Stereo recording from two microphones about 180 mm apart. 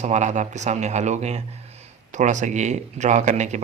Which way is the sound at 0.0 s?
40° right (ahead or behind).